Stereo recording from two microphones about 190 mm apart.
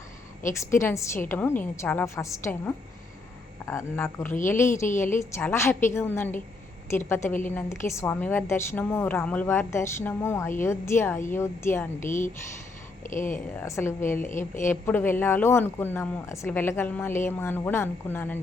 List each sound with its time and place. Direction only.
0.6 s speech: 15° left (ahead or behind)
13.1 s speech: 40° left (ahead or behind)
13.6 s speech: 15° left (ahead or behind)